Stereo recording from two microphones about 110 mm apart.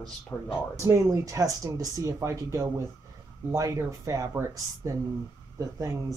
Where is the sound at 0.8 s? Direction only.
25° right (ahead or behind).